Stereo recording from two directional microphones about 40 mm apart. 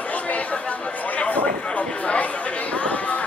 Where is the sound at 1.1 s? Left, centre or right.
Left.